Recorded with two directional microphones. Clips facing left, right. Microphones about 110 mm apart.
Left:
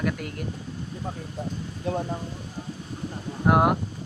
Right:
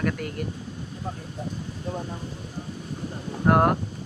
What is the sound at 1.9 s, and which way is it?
Speech, 80° left.